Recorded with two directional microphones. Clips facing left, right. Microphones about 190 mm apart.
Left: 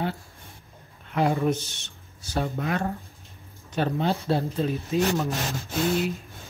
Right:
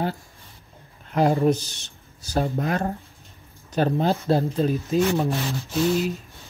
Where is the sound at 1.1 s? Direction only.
35° right (ahead or behind).